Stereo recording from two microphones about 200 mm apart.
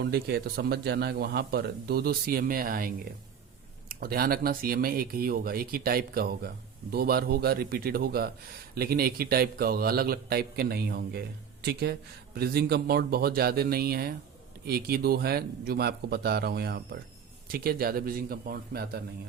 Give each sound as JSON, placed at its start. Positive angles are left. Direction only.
{"t": 0.0, "sound": "a man's voice", "side_deg": -50}